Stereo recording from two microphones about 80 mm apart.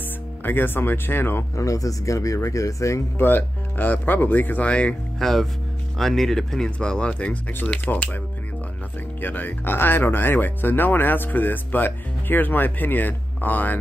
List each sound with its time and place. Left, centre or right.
0.4 s speech: left
1.6 s speech: left
3.2 s speech: left
5.2 s speech: centre; by 8.2 s left
9.2 s speech: left